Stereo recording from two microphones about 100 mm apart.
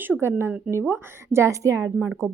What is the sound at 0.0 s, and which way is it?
Speech, 25° right (ahead or behind).